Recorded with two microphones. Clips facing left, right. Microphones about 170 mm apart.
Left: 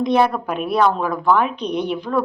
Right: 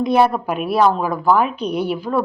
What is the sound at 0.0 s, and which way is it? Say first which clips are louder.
A woman's voice: right 1 dB; 5° right (ahead or behind).